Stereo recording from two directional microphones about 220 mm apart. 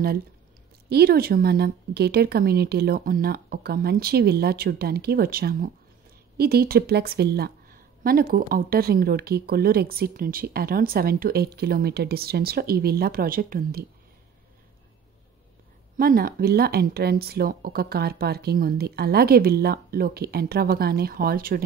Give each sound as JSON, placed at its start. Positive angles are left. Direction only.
{"t": 0.8, "sound": "a woman's voice", "side_deg": -45}
{"t": 16.0, "sound": "speech", "side_deg": -40}